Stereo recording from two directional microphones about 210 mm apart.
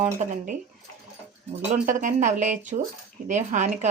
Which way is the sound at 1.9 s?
35° right (ahead or behind).